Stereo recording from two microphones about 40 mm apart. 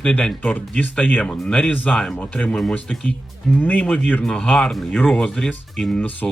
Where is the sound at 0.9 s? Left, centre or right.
Left.